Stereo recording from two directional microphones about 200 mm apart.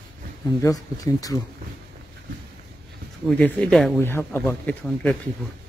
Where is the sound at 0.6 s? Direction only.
15° left (ahead or behind).